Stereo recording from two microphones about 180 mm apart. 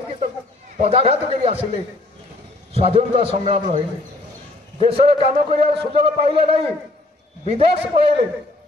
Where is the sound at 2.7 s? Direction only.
35° right (ahead or behind).